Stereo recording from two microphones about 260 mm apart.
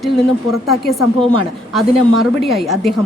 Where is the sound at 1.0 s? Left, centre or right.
Left.